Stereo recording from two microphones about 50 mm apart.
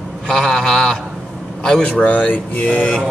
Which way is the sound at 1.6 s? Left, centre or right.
Centre.